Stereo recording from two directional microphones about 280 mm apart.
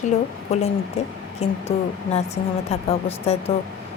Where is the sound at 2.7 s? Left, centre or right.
Left.